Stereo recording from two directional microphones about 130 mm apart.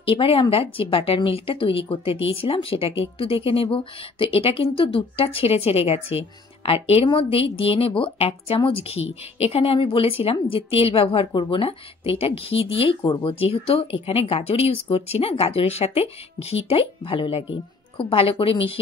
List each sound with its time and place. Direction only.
0.0 s a woman's voice: 45° left (ahead or behind)